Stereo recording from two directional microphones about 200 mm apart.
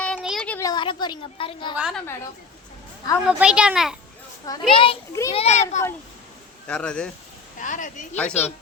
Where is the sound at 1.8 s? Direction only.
5° right (ahead or behind).